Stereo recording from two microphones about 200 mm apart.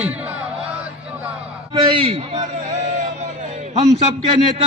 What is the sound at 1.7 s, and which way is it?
Speech, 25° right (ahead or behind).